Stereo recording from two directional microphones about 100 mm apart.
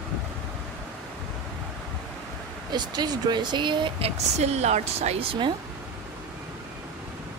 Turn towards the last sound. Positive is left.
turn(degrees=-60)  # may be behind; listen again after turning